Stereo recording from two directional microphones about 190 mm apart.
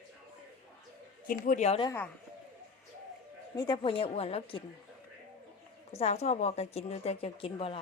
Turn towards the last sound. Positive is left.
turn(degrees=30)  # may be behind; listen again after turning